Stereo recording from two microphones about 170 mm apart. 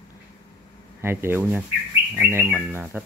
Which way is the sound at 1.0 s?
15° right (ahead or behind).